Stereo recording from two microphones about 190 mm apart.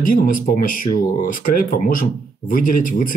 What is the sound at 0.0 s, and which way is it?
Speech, 50° left (ahead or behind).